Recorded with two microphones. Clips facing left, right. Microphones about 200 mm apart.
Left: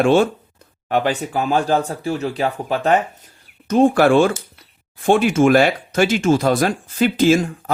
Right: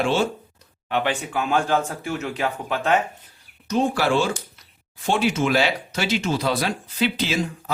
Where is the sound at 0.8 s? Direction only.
40° left (ahead or behind).